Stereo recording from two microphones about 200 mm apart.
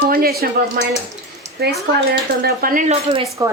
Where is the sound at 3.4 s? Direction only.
20° right (ahead or behind).